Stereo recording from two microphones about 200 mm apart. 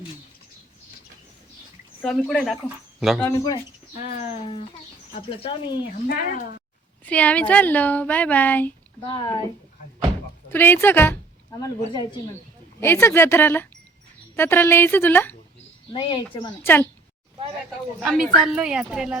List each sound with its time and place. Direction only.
2.0 s speech: 5° left (ahead or behind)
3.2 s speech: 15° left (ahead or behind)
3.9 s speech: 35° left (ahead or behind)
6.1 s speech: 50° left (ahead or behind)
7.0 s speech: 5° left (ahead or behind)
9.0 s speech: 25° left (ahead or behind)
10.5 s speech: 10° left (ahead or behind)
15.9 s speech: 25° left (ahead or behind)
16.6 s speech: 10° left (ahead or behind)
18.0 s speech: centre (ahead or behind)